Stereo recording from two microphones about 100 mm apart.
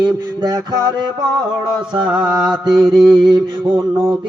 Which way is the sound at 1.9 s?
55° right (ahead or behind).